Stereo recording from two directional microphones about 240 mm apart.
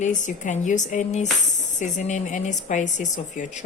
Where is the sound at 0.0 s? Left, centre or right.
Left.